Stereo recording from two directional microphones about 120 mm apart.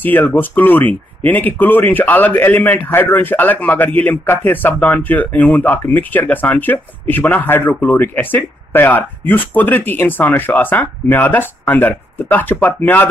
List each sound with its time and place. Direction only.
0.0 s speech: 15° left (ahead or behind)